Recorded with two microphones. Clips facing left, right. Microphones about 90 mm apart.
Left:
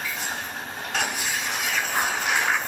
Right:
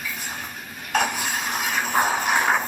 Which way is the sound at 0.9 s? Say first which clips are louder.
Right 5 dB; 45° right (ahead or behind).